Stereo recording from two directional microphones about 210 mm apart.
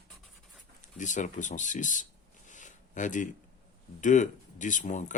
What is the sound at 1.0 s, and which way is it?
Speech, 35° left (ahead or behind).